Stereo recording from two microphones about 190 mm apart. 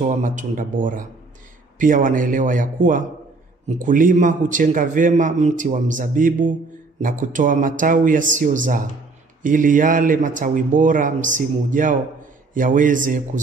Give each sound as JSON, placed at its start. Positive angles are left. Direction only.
{"t": 0.0, "sound": "a man's voice", "side_deg": -40}